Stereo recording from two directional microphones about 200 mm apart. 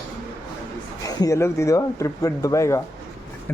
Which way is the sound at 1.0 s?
20° left (ahead or behind).